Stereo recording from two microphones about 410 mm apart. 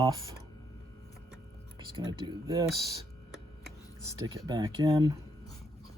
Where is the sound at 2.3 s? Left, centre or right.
Centre.